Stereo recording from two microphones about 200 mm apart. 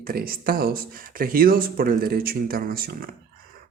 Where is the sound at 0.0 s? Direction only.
50° right (ahead or behind).